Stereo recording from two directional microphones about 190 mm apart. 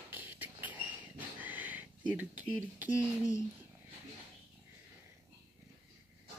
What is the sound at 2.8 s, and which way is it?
Speech, 15° left (ahead or behind).